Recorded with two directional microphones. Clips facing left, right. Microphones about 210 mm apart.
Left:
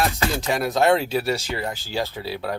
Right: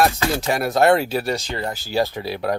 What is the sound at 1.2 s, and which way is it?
Speech, 5° left (ahead or behind).